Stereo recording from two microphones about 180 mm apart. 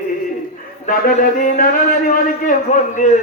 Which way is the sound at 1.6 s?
50° left (ahead or behind).